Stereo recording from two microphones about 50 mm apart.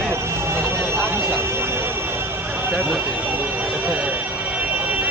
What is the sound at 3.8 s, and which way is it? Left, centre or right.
Vehicle, right.